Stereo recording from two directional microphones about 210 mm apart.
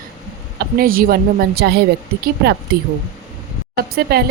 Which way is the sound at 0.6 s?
45° right (ahead or behind).